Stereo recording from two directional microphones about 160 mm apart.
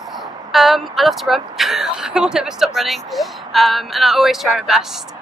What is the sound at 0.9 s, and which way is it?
Speech, centre (ahead or behind).